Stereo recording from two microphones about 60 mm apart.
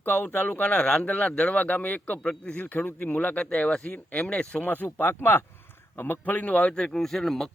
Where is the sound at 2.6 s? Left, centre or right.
Left.